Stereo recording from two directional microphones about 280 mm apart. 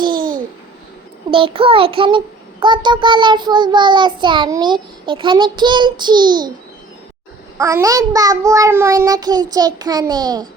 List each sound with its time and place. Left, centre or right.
0.2 s babbling: right
1.3 s a child's voice: centre
7.6 s a child's voice: centre